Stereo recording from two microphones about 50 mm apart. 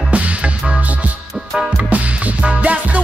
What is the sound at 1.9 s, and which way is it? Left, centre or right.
Music, right.